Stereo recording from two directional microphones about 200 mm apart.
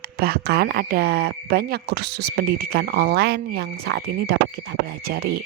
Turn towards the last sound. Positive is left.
turn(degrees=-55)  # may be behind; listen again after turning